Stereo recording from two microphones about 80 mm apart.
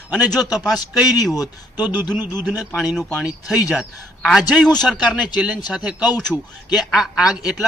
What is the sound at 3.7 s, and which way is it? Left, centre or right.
A man's voice, centre.